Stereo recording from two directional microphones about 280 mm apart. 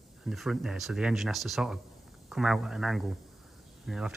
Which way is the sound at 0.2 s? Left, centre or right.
Centre.